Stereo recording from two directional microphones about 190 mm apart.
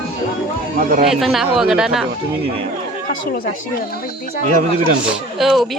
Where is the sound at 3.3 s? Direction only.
50° left (ahead or behind).